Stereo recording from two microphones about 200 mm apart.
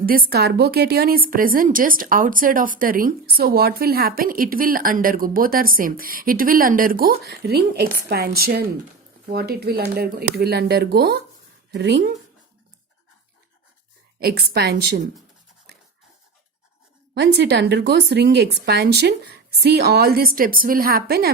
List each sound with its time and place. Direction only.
0.0 s a woman's voice: 45° right (ahead or behind)
14.2 s speech: 50° right (ahead or behind)
17.2 s speech: 60° right (ahead or behind)